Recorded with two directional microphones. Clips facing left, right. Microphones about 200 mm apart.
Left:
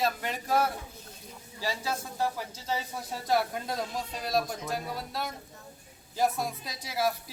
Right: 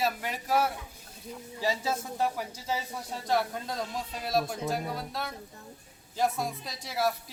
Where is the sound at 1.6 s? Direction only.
20° right (ahead or behind).